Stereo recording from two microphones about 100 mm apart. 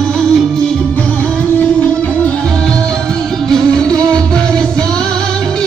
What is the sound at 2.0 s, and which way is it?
Music, 15° left (ahead or behind).